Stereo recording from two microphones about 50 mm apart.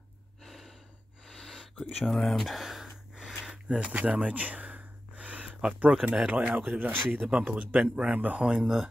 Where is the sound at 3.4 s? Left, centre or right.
Centre.